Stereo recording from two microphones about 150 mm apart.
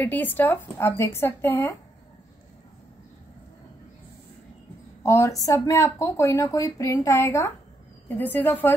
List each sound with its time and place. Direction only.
0.0 s speech: 10° left (ahead or behind)
5.0 s speech: 20° left (ahead or behind)